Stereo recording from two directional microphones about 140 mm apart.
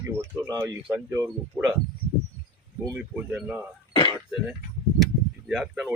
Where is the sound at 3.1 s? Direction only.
10° right (ahead or behind).